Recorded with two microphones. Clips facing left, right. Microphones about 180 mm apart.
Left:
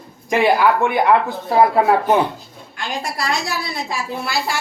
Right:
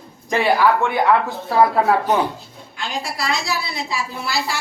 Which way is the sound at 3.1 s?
45° left (ahead or behind).